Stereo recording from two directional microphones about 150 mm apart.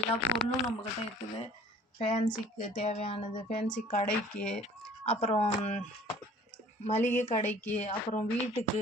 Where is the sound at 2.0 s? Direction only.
45° left (ahead or behind).